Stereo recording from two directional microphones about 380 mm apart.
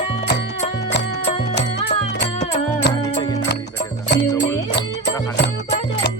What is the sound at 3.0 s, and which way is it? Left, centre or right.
Music, centre.